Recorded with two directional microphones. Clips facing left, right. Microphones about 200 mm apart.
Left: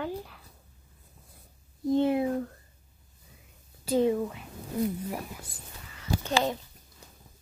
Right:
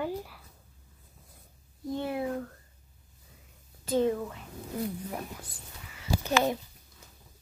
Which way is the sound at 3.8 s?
10° left (ahead or behind).